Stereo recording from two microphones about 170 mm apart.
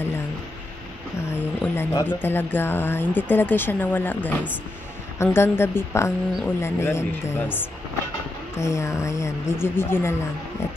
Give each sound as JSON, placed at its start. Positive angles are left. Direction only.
{"t": 1.3, "sound": "speech", "side_deg": 15}
{"t": 8.5, "sound": "speech", "side_deg": 15}